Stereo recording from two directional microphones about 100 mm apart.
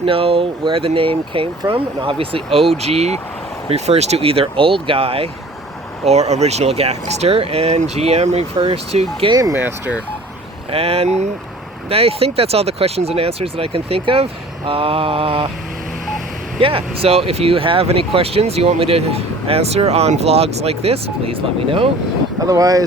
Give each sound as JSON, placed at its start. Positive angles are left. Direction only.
{"t": 0.0, "sound": "speech", "side_deg": -70}
{"t": 2.8, "sound": "speech", "side_deg": -90}
{"t": 6.1, "sound": "speech", "side_deg": -90}
{"t": 9.3, "sound": "speech", "side_deg": -35}
{"t": 9.6, "sound": "speech", "side_deg": -20}
{"t": 10.7, "sound": "speech", "side_deg": -80}
{"t": 14.7, "sound": "mantra", "side_deg": -65}
{"t": 16.6, "sound": "speech", "side_deg": -65}
{"t": 22.4, "sound": "speech", "side_deg": -35}